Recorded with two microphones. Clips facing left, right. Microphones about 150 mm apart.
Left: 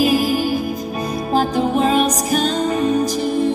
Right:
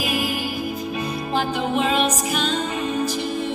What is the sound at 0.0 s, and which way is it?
Music, 35° left (ahead or behind).